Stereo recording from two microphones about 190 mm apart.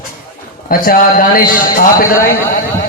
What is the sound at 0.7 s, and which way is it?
A man's voice, 50° left (ahead or behind).